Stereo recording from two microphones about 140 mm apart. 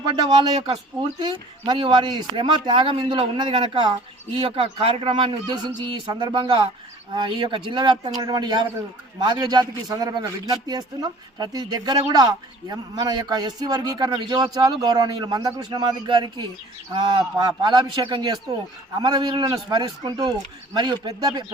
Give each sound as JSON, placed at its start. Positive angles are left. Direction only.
{"t": 0.3, "sound": "a man's voice", "side_deg": -30}